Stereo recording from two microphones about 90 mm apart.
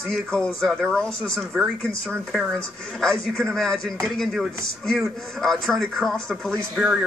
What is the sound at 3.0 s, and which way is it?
A man's voice, 5° left (ahead or behind).